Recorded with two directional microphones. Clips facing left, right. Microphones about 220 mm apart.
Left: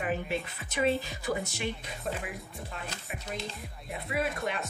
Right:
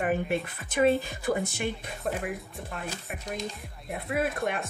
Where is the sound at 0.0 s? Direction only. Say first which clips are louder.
Right 4 dB; 50° right (ahead or behind).